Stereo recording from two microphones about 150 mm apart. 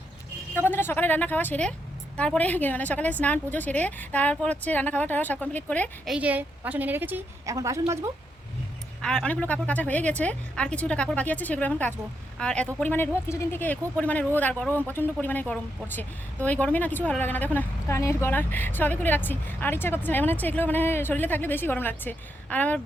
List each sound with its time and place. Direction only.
0.5 s a woman's voice: 15° left (ahead or behind)
6.1 s a woman's voice: 10° right (ahead or behind)
9.0 s a woman's voice: 5° left (ahead or behind)